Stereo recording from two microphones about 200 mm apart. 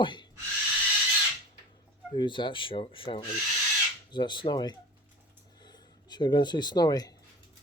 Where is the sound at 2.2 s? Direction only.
25° left (ahead or behind).